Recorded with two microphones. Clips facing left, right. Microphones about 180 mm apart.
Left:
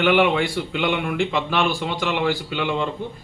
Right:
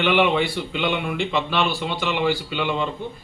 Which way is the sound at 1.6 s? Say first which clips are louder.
Left 3 dB; 50° left (ahead or behind).